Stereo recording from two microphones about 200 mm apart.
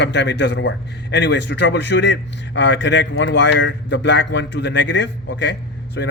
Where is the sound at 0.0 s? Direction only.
60° left (ahead or behind).